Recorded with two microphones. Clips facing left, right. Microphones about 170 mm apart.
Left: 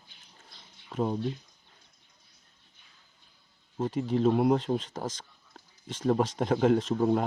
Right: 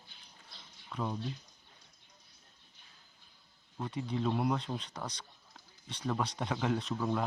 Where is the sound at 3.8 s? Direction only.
40° left (ahead or behind).